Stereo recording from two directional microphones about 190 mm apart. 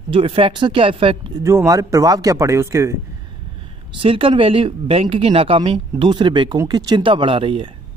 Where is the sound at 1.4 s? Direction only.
15° right (ahead or behind).